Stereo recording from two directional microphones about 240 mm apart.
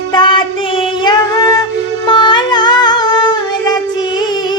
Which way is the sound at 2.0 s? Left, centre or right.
Centre.